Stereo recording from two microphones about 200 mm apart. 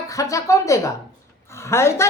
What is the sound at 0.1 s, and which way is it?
A woman's voice, 15° left (ahead or behind).